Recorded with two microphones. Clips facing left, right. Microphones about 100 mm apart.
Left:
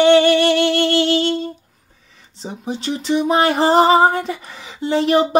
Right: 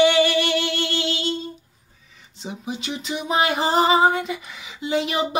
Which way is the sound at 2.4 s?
35° left (ahead or behind).